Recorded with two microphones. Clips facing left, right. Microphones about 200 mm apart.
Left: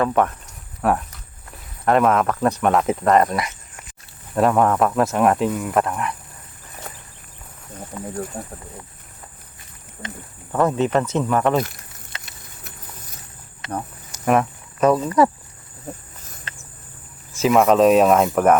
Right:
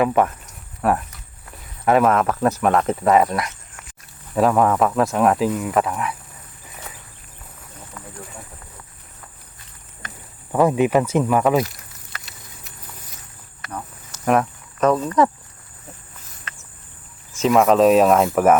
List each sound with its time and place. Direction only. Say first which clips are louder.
0.0 s speech: right 1 dB; 5° right (ahead or behind)
7.9 s a sound: left 8 dB; 25° left (ahead or behind)
8.4 s speech: left 8 dB; 45° left (ahead or behind)
10.5 s speech: right 2 dB; 10° right (ahead or behind)
14.3 s insect: even; 5° left (ahead or behind)
17.3 s speech: even; 5° left (ahead or behind)